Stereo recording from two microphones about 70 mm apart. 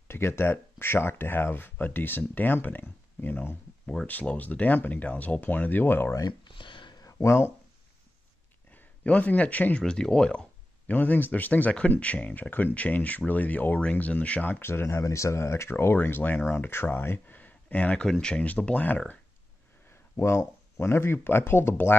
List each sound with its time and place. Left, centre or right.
0.1 s speech: left
3.8 s speech: centre
4.1 s speech: left
6.1 s a sound: left
7.1 s speech: left
8.7 s speech: left
9.8 s speech: centre
10.9 s speech: left
19.9 s a sound: left
20.8 s speech: left